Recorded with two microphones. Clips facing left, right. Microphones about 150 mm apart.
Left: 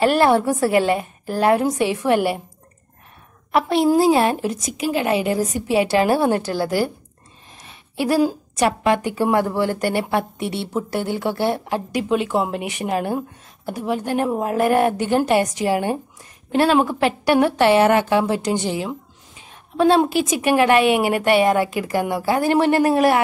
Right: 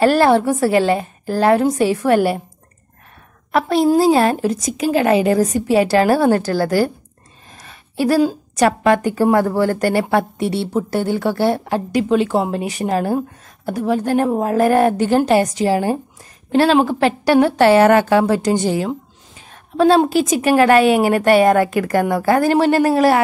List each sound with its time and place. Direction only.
0.0 s a woman's voice: 35° right (ahead or behind)
3.5 s a woman's voice: 40° right (ahead or behind)
7.6 s a sound: 40° right (ahead or behind)
8.5 s a woman's voice: 45° right (ahead or behind)
22.5 s a woman's voice: 35° right (ahead or behind)